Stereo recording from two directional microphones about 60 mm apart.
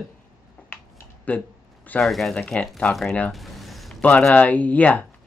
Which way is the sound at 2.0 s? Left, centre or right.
Centre.